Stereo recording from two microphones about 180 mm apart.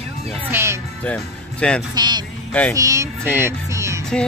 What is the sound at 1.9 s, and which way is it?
Speech, 25° right (ahead or behind).